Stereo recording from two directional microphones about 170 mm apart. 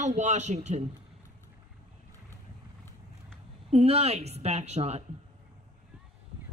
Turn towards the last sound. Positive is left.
turn(degrees=-40)  # may be behind; listen again after turning